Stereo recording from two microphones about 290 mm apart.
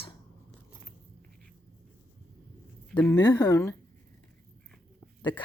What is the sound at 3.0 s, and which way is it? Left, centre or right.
Speech, centre.